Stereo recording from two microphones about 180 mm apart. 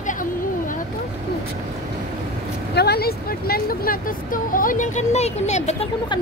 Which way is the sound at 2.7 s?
60° left (ahead or behind).